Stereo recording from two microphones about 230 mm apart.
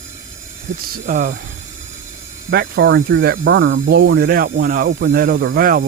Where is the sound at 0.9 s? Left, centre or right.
Right.